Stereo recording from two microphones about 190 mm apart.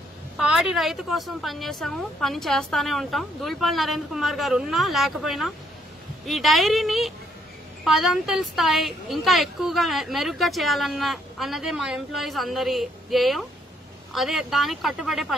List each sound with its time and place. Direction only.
0.4 s a woman's voice: centre (ahead or behind)